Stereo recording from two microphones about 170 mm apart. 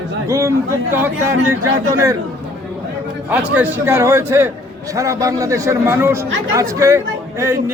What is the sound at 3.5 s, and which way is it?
A man's voice, 15° right (ahead or behind).